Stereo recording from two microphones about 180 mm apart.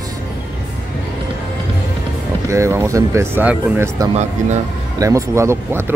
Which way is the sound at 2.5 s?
15° right (ahead or behind).